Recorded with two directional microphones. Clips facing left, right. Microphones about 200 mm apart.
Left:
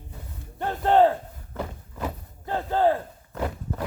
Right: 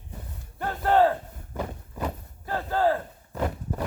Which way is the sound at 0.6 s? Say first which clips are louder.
Left 2 dB; 20° left (ahead or behind).